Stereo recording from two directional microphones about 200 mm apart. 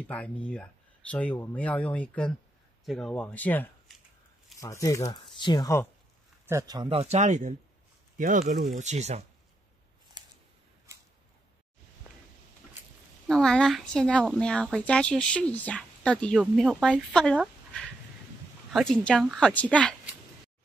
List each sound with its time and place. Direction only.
0.1 s speech: 5° left (ahead or behind)
6.4 s speech: 15° right (ahead or behind); by 9.2 s 35° right (ahead or behind)
13.3 s speech: 5° left (ahead or behind)
18.7 s speech: centre (ahead or behind)